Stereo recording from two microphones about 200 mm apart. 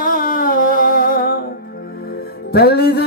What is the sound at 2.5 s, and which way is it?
Speech, 50° left (ahead or behind).